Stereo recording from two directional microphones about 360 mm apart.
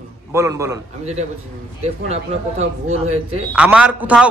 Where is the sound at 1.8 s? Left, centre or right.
Centre.